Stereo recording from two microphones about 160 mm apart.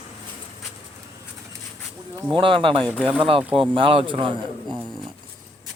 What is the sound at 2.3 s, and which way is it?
Speech, 30° right (ahead or behind).